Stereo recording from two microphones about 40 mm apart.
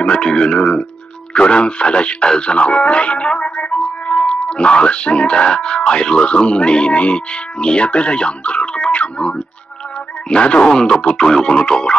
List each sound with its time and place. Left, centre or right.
0.0 s speech: left
10.3 s speech: left